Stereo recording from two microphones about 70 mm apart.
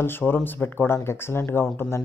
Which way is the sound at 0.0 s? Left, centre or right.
Left.